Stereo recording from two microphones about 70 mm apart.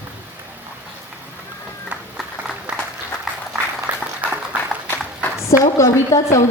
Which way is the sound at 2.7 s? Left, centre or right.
Centre.